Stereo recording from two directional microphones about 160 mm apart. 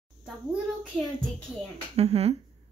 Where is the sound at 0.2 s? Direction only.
5° right (ahead or behind).